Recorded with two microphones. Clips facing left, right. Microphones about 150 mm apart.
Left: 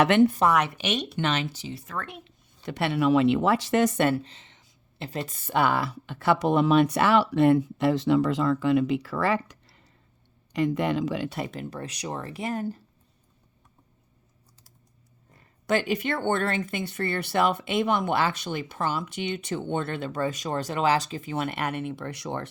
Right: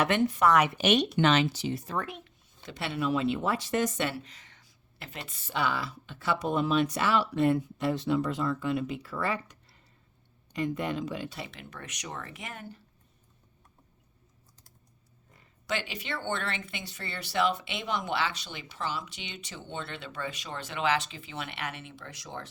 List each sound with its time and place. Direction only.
0.0 s speech: 70° left (ahead or behind)
0.8 s speech: 55° right (ahead or behind)
1.3 s speech: 85° right
2.6 s speech: 60° left (ahead or behind)
4.2 s a sound: 25° left (ahead or behind)
5.0 s speech: 40° left (ahead or behind); by 11.3 s 90° left
11.3 s speech: 45° left (ahead or behind)
15.6 s speech: 50° left (ahead or behind)